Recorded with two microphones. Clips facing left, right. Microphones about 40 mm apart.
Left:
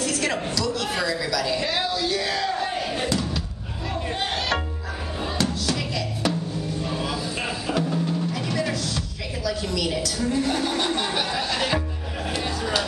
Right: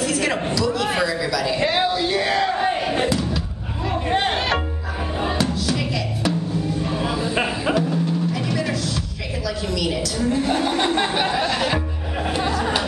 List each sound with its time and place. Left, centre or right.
0.0 s a man's voice: centre
1.6 s battle cry: right
4.3 s music: right
5.4 s music: centre
6.8 s a sound: centre; by 7.7 s right
7.7 s music: centre
9.7 s a sound: centre
11.4 s music: centre